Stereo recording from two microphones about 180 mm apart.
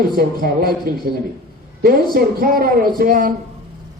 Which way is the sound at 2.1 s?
55° right (ahead or behind).